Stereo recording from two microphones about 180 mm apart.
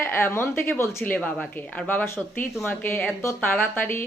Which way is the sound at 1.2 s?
5° left (ahead or behind).